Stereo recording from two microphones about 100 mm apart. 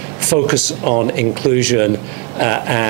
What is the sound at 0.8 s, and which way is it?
Speech, 15° right (ahead or behind).